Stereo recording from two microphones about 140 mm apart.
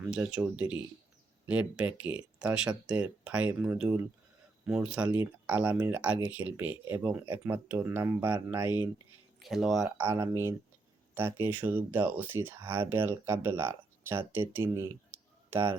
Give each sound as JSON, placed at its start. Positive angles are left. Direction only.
{"t": 0.0, "sound": "speech", "side_deg": -5}
{"t": 9.4, "sound": "speech", "side_deg": 0}
{"t": 10.0, "sound": "speech", "side_deg": -20}